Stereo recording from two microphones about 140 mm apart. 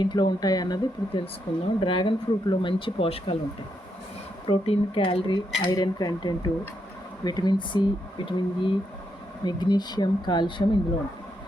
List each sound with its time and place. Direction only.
0.0 s speech: 35° left (ahead or behind)
1.2 s speech: 40° left (ahead or behind)
4.4 s dishes: 45° left (ahead or behind)
5.7 s speech: 25° left (ahead or behind)